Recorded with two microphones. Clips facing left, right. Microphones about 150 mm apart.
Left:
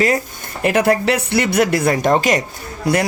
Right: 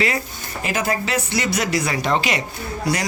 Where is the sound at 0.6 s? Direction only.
65° left (ahead or behind); by 2.4 s 45° left (ahead or behind).